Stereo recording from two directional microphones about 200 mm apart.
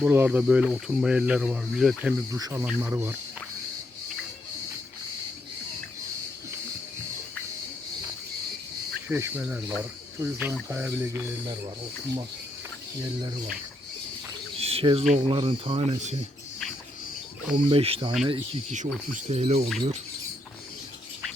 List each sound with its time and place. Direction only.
0.0 s speech: 10° right (ahead or behind)
2.3 s speech: 15° right (ahead or behind)
9.0 s speech: 10° right (ahead or behind)
14.6 s bird: 30° right (ahead or behind)
15.1 s speech: 25° right (ahead or behind)
17.5 s speech: 25° right (ahead or behind)